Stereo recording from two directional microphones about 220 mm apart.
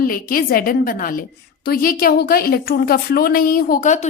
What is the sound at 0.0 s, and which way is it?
A woman's voice, 40° left (ahead or behind).